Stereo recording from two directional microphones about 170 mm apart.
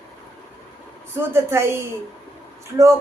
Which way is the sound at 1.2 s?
15° right (ahead or behind).